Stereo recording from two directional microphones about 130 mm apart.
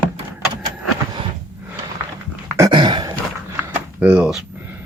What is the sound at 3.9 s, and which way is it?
Door, 10° right (ahead or behind).